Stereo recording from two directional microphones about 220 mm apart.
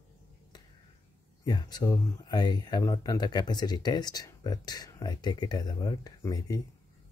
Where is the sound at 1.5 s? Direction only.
20° left (ahead or behind).